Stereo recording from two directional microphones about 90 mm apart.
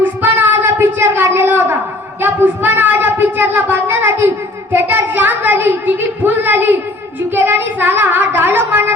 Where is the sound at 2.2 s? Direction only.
20° right (ahead or behind).